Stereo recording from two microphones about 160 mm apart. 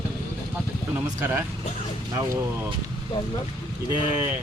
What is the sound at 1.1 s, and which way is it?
Speech, 15° right (ahead or behind).